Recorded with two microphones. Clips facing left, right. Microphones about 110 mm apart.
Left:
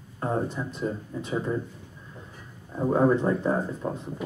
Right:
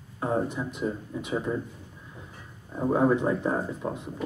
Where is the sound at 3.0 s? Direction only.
15° right (ahead or behind).